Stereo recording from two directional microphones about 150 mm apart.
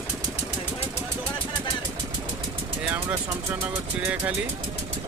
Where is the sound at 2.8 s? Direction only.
15° right (ahead or behind).